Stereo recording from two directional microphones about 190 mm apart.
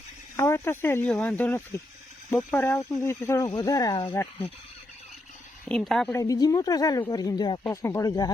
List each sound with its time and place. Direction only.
0.3 s speech: 15° left (ahead or behind)
5.6 s a woman's voice: 5° left (ahead or behind)
6.1 s speech: 20° left (ahead or behind)